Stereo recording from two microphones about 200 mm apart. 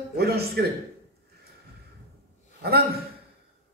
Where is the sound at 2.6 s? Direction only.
50° right (ahead or behind).